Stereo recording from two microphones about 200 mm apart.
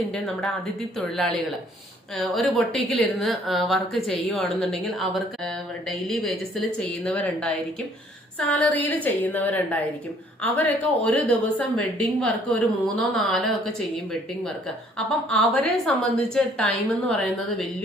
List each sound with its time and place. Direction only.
0.9 s a woman's voice: centre (ahead or behind)
6.7 s a woman's voice: 5° left (ahead or behind)